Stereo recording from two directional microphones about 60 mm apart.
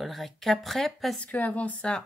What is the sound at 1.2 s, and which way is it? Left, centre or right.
Speech, left.